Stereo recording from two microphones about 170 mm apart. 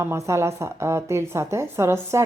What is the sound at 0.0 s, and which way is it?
Speech, 15° right (ahead or behind).